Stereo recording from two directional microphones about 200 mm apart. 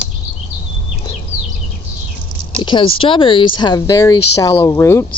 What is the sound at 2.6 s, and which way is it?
Speech, 25° left (ahead or behind).